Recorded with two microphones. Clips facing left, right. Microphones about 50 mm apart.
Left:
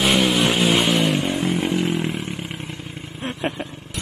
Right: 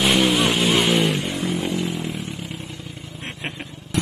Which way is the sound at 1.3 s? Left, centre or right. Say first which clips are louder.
Left 3 dB; left.